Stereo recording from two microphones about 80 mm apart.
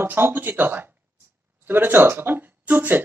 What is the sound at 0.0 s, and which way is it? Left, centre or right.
Speech, right.